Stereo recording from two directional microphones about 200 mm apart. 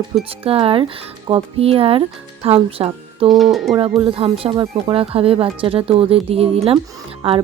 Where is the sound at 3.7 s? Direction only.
30° right (ahead or behind).